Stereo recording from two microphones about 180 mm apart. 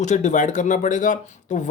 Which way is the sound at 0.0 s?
40° left (ahead or behind).